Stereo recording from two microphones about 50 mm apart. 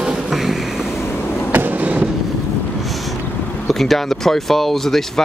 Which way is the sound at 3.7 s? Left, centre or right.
Centre.